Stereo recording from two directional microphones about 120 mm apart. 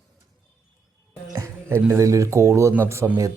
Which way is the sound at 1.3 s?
20° right (ahead or behind).